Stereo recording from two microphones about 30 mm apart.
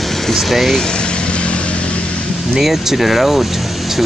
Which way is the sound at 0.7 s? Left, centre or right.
Left.